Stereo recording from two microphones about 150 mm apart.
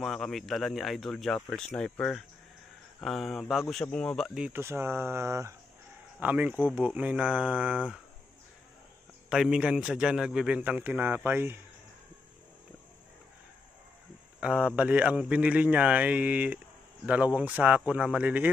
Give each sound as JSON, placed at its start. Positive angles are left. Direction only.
{"t": 0.0, "sound": "speech", "side_deg": 5}
{"t": 4.5, "sound": "a man's voice", "side_deg": -15}
{"t": 9.3, "sound": "a man's voice", "side_deg": -5}
{"t": 14.4, "sound": "a man's voice", "side_deg": -5}